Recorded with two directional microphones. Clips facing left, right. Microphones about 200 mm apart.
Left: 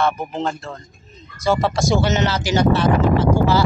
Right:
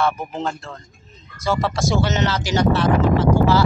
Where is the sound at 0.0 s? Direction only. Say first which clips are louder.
Left 1 dB; 5° right (ahead or behind).